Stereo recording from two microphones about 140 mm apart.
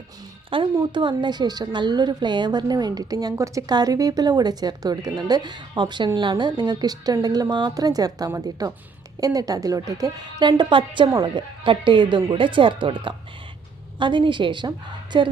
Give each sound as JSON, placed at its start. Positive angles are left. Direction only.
{"t": 0.8, "sound": "a woman's voice", "side_deg": -35}